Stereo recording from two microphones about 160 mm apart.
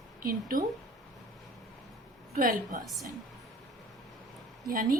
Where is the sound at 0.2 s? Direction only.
65° right (ahead or behind).